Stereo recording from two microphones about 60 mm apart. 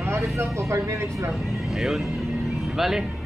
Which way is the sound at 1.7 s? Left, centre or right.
Centre.